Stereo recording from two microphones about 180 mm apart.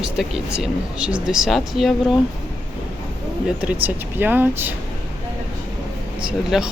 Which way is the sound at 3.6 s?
10° right (ahead or behind).